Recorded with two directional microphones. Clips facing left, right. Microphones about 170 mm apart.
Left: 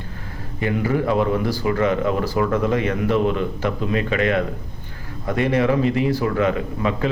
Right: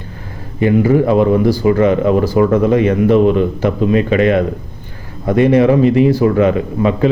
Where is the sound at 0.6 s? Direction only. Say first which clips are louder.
Right 9 dB; 25° right (ahead or behind).